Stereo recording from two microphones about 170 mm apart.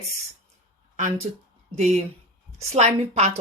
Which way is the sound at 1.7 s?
40° right (ahead or behind).